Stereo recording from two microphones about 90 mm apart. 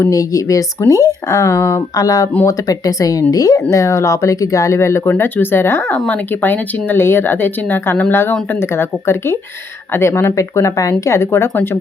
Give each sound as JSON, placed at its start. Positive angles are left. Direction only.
{"t": 0.0, "sound": "speech", "side_deg": 40}